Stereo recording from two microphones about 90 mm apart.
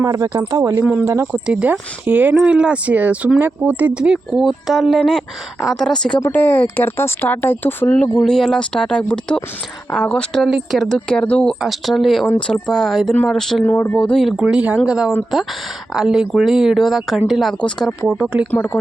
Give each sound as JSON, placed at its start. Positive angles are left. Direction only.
{"t": 0.0, "sound": "speech", "side_deg": -40}
{"t": 0.7, "sound": "speech", "side_deg": -20}
{"t": 1.0, "sound": "speech", "side_deg": -30}
{"t": 1.5, "sound": "speech", "side_deg": -10}
{"t": 6.3, "sound": "speech", "side_deg": 20}
{"t": 8.2, "sound": "speech", "side_deg": 5}
{"t": 10.4, "sound": "speech", "side_deg": 0}
{"t": 11.6, "sound": "speech", "side_deg": 0}
{"t": 14.3, "sound": "speech", "side_deg": 0}
{"t": 14.5, "sound": "speech", "side_deg": -15}
{"t": 18.1, "sound": "speech", "side_deg": -10}
{"t": 18.5, "sound": "speech", "side_deg": 20}